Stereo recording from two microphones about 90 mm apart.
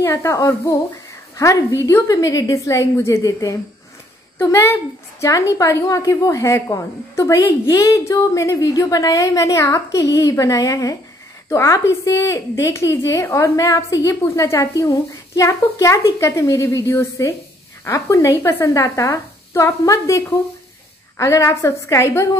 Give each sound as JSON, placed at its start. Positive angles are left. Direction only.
{"t": 0.0, "sound": "a woman's voice", "side_deg": 35}
{"t": 2.0, "sound": "a woman's voice", "side_deg": 45}
{"t": 4.4, "sound": "a woman's voice", "side_deg": 25}